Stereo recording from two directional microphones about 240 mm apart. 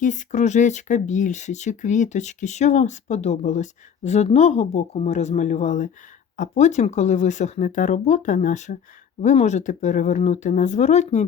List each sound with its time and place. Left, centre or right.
0.0 s speech: left